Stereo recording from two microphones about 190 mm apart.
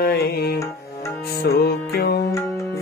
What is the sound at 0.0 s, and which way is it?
Music, 55° left (ahead or behind).